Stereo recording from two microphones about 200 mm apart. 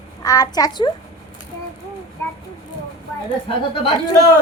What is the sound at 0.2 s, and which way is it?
Speech, 20° left (ahead or behind).